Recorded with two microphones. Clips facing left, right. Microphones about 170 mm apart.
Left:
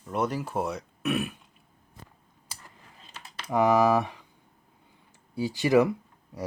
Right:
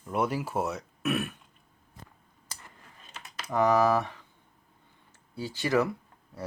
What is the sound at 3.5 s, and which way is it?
Speech, 10° left (ahead or behind).